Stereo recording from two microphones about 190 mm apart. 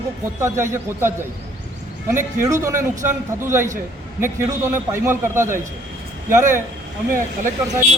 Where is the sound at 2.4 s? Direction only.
15° right (ahead or behind).